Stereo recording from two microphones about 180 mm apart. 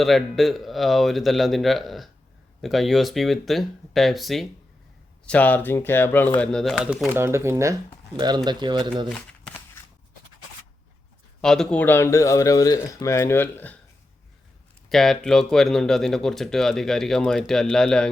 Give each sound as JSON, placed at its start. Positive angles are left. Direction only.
{"t": 0.0, "sound": "speech", "side_deg": 0}
{"t": 11.3, "sound": "speech", "side_deg": 5}
{"t": 14.8, "sound": "speech", "side_deg": 0}